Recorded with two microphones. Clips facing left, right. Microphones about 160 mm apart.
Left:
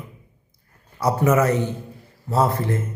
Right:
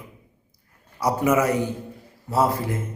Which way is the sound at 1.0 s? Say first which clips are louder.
Left 2 dB; 10° right (ahead or behind).